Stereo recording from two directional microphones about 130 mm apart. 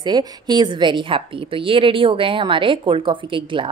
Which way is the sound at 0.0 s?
30° right (ahead or behind).